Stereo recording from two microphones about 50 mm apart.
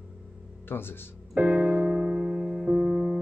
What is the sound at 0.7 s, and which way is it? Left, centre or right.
Speech, left.